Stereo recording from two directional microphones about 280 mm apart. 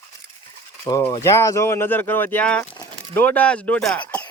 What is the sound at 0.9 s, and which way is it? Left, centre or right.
Speech, centre.